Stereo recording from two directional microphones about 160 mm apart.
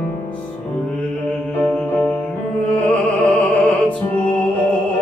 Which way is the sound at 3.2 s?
5° left (ahead or behind).